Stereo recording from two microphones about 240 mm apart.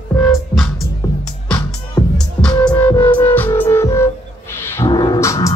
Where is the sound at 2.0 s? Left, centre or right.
Centre.